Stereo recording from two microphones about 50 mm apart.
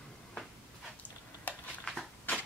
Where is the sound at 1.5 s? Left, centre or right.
Left.